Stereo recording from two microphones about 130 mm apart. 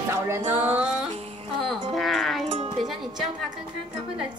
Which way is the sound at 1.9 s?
Centre (ahead or behind).